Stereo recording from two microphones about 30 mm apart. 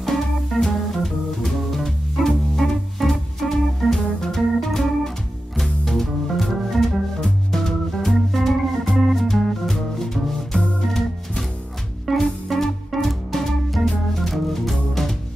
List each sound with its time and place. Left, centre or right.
0.0 s music: centre
1.0 s organ: centre
5.6 s music: centre
6.4 s organ: centre
7.5 s music: centre
8.1 s organ: centre
12.1 s music: centre
13.8 s organ: centre